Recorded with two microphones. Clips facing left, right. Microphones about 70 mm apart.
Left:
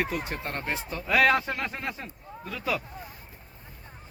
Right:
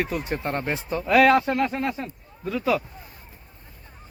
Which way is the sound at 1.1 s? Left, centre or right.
Centre.